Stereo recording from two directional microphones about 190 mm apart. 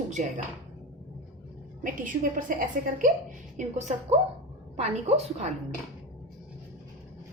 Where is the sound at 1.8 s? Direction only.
45° right (ahead or behind).